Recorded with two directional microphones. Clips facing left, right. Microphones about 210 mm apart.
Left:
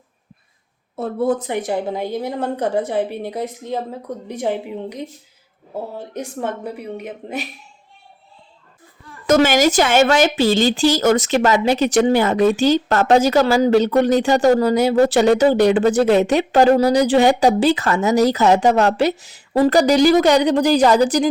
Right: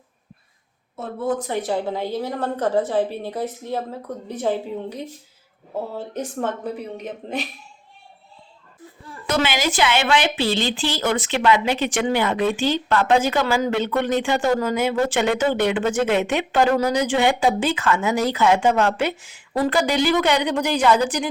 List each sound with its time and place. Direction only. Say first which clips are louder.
1.4 s a woman's voice: left 2 dB; 15° left (ahead or behind)
6.1 s a woman's voice: left 1 dB; 10° left (ahead or behind)
9.2 s speech: left 8 dB; 45° left (ahead or behind)